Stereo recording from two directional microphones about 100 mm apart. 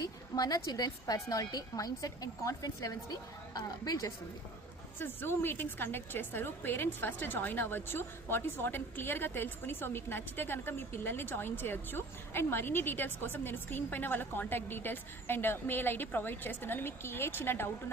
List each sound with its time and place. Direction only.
0.0 s a woman's voice: 40° left (ahead or behind)
4.9 s a woman's voice: 25° left (ahead or behind)